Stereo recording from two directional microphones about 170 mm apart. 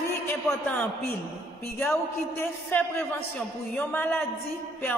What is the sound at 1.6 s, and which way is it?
A man's voice, 15° left (ahead or behind).